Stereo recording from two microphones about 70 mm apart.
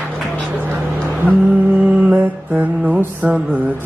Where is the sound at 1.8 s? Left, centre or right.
Centre.